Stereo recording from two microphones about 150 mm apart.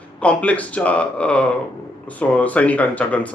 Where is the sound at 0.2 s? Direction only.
10° left (ahead or behind).